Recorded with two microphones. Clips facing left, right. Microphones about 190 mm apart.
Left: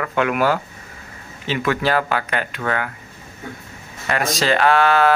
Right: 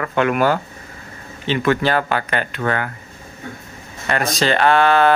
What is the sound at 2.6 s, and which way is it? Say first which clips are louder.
Speech: right 2 dB; 35° right (ahead or behind).